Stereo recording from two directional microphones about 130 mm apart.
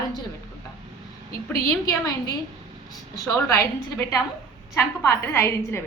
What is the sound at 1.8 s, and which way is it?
Speech, 25° left (ahead or behind).